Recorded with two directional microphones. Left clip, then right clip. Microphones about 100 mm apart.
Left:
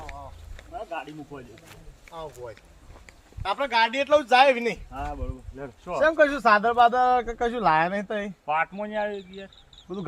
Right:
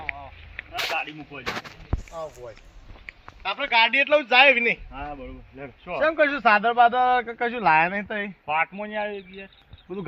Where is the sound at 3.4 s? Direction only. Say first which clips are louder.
Right 2 dB; 55° left (ahead or behind).